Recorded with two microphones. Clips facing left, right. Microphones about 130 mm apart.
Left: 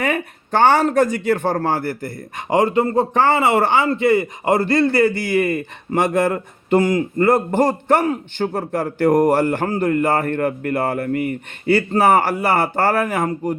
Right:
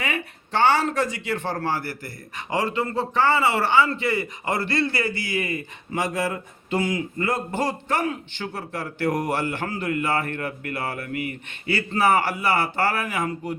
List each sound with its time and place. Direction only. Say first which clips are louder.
0.0 s a man's voice: left 8 dB; 55° left (ahead or behind)